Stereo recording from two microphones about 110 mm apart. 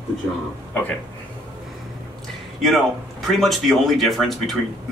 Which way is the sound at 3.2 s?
Centre (ahead or behind).